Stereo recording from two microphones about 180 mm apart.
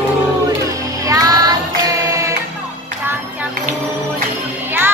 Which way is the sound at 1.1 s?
20° right (ahead or behind).